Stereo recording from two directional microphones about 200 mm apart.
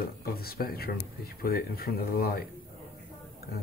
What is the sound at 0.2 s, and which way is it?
Speech, 50° left (ahead or behind).